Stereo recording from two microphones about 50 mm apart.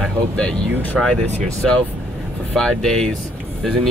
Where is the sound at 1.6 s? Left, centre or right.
Centre.